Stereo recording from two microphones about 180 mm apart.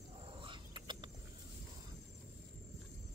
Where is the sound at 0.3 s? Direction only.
30° right (ahead or behind).